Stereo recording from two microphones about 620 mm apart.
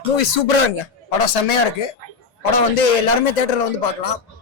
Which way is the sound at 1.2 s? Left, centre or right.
Left.